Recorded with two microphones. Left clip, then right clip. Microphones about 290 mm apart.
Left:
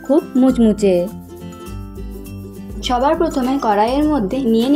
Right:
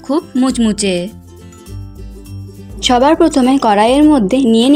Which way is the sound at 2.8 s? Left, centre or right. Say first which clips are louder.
Right 6 dB; right.